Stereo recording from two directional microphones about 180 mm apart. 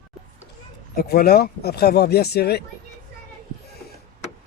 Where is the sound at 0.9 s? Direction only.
60° left (ahead or behind).